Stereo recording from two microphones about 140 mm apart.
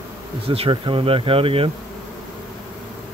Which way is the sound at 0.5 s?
40° right (ahead or behind).